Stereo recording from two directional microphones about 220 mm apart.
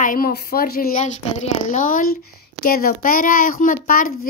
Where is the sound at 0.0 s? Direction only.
40° left (ahead or behind).